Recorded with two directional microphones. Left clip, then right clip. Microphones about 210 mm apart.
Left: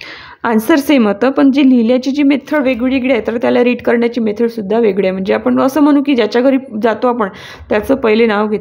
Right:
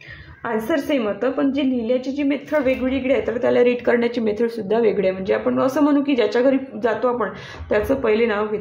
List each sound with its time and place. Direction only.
0.4 s a woman's voice: 50° left (ahead or behind)